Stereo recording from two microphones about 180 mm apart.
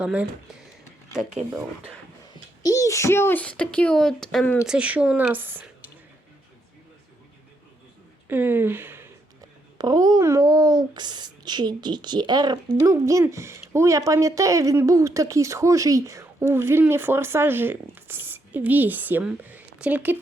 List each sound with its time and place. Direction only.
0.0 s speech: 5° right (ahead or behind)
2.6 s a child's voice: 20° left (ahead or behind); by 5.7 s 10° right (ahead or behind)
8.3 s speech: 10° right (ahead or behind)